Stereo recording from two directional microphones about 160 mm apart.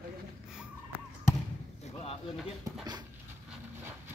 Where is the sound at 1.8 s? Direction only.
40° left (ahead or behind).